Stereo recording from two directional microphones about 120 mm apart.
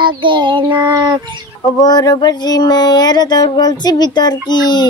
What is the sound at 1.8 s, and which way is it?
Child singing, 35° left (ahead or behind).